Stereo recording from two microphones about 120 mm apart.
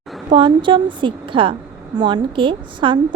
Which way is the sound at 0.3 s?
45° right (ahead or behind).